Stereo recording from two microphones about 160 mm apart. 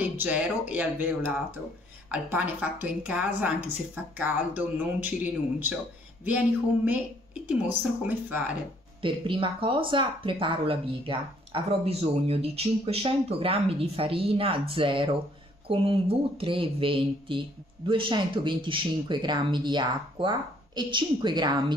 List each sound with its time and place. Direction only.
0.0 s a woman's voice: 10° right (ahead or behind)
9.0 s speech: 35° right (ahead or behind)